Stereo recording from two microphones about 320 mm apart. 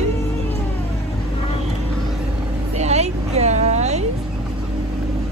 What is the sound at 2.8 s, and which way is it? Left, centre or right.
Vehicle, centre.